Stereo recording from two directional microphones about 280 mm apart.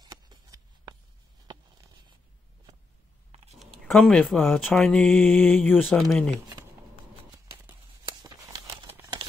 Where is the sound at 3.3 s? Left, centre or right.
Right.